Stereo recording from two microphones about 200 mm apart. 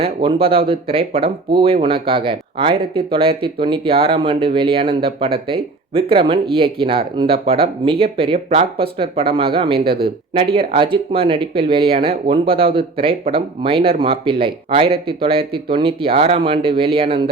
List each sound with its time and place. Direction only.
0.0 s speech: 25° right (ahead or behind)
9.7 s speech: 50° right (ahead or behind)
10.0 s speech: 25° right (ahead or behind)